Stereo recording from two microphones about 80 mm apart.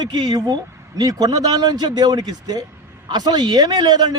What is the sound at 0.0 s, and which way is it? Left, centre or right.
A man's voice, right.